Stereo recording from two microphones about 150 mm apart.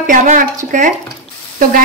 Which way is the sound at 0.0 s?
60° right (ahead or behind).